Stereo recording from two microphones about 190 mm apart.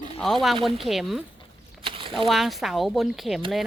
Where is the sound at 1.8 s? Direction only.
25° right (ahead or behind).